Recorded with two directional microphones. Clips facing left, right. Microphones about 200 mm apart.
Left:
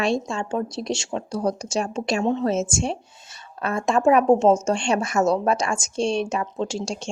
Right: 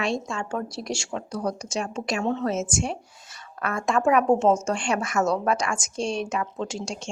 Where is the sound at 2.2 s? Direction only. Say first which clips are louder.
Left 3 dB; 15° left (ahead or behind).